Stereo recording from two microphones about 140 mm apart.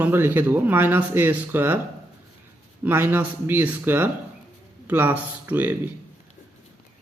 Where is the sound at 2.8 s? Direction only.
15° right (ahead or behind).